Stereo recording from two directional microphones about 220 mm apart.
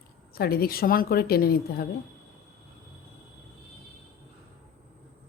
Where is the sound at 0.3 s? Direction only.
45° left (ahead or behind).